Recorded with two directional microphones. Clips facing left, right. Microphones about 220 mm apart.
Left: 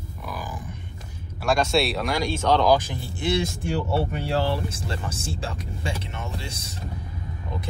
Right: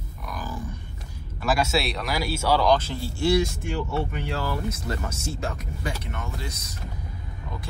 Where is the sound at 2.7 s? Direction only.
15° left (ahead or behind).